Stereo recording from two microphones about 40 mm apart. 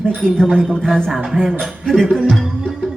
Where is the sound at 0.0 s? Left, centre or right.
Centre.